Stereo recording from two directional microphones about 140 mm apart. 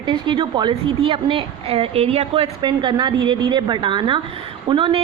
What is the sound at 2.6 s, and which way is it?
Speech, 30° right (ahead or behind).